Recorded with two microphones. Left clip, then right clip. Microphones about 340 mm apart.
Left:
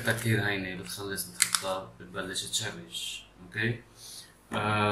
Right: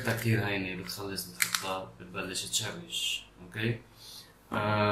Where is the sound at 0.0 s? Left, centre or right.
Centre.